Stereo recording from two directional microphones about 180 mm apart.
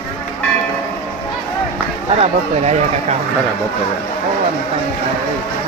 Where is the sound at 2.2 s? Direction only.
40° right (ahead or behind).